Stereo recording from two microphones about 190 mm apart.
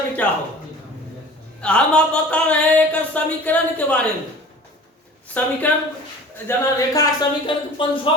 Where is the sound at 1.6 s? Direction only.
5° left (ahead or behind).